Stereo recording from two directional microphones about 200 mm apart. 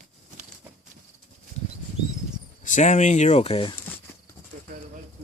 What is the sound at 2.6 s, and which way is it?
Speech, 35° left (ahead or behind).